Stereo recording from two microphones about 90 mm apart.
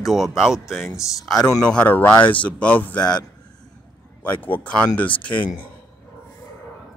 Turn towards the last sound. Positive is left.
turn(degrees=15)  # may be behind; listen again after turning